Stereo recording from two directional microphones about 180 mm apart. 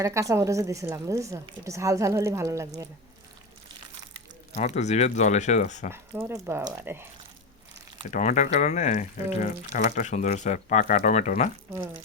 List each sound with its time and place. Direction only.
0.0 s a woman's voice: 15° right (ahead or behind)
4.5 s speech: 40° left (ahead or behind)
5.9 s a woman's voice: 15° right (ahead or behind)
8.1 s speech: 40° left (ahead or behind)